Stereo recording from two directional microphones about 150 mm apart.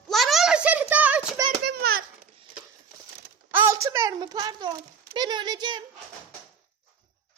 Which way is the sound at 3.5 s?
15° right (ahead or behind).